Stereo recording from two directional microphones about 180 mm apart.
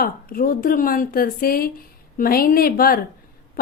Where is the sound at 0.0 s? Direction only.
55° left (ahead or behind).